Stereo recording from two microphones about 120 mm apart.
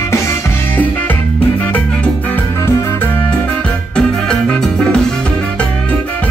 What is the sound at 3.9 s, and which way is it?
Music, 5° left (ahead or behind).